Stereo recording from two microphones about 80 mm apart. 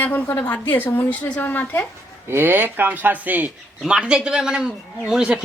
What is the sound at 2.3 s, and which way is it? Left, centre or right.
Speech, right.